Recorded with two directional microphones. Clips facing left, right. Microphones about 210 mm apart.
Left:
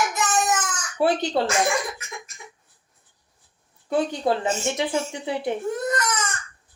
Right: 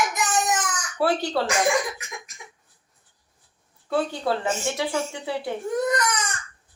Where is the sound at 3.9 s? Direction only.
15° left (ahead or behind).